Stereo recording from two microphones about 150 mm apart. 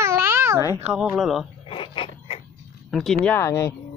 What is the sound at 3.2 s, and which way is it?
Speech, 15° left (ahead or behind).